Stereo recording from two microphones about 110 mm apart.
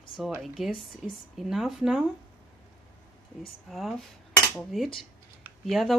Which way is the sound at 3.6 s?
Centre (ahead or behind).